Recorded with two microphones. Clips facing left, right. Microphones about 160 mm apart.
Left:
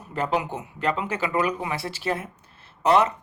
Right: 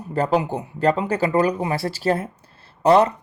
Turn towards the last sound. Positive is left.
turn(degrees=-35)  # may be behind; listen again after turning